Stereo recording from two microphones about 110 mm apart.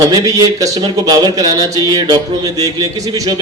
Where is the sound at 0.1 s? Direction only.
30° right (ahead or behind).